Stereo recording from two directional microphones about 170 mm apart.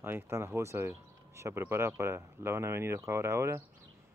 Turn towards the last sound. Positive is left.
turn(degrees=-15)  # may be behind; listen again after turning